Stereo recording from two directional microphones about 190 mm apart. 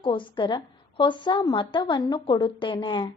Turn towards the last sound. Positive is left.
turn(degrees=25)  # may be behind; listen again after turning